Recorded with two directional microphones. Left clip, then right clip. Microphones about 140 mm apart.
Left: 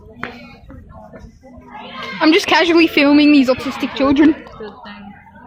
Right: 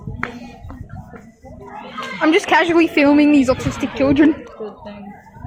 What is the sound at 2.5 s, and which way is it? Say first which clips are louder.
A woman's voice: left 2 dB; 45° left (ahead or behind).